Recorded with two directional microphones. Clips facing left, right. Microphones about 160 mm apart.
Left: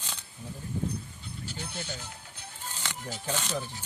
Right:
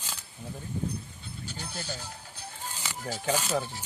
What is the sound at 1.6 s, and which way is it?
Music, 35° right (ahead or behind).